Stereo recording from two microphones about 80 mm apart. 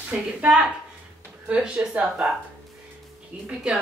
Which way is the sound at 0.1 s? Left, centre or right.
Centre.